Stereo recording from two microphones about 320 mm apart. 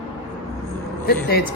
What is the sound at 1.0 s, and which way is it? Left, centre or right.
Speech, left.